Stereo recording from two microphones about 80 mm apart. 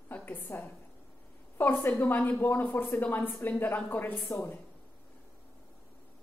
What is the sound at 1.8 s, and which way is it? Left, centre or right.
A woman's voice, left.